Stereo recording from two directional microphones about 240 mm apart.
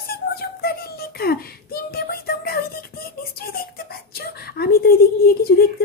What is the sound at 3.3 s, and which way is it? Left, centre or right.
Beatboxing, left.